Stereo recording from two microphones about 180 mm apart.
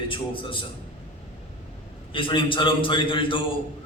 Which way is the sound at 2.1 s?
30° left (ahead or behind).